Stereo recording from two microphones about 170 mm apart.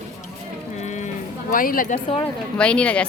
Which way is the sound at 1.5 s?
55° left (ahead or behind).